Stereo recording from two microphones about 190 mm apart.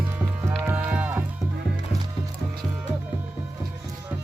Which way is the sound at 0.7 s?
10° right (ahead or behind).